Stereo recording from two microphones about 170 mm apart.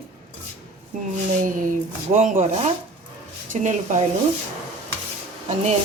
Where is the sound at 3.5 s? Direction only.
45° right (ahead or behind).